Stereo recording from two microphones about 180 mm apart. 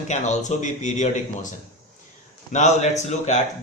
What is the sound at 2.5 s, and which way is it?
Speech, 40° left (ahead or behind).